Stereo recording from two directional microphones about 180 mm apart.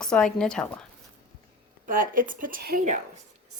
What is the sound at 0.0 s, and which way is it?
Speech, 5° left (ahead or behind).